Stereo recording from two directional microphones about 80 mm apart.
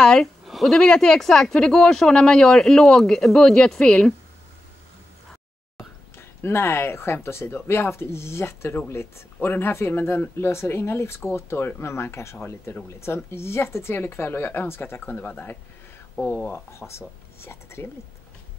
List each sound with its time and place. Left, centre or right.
0.0 s speech: centre
6.1 s speech: left